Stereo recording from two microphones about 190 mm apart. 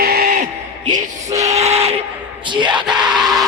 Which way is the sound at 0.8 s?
15° right (ahead or behind).